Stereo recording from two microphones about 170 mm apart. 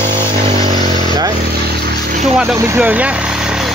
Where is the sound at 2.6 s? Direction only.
15° right (ahead or behind).